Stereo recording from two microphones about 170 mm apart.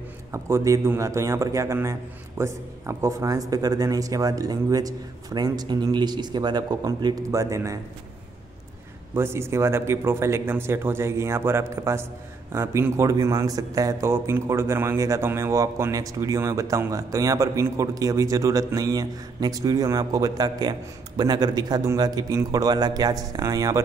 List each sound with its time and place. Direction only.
0.3 s a man's voice: 15° right (ahead or behind)
9.1 s a man's voice: 15° right (ahead or behind)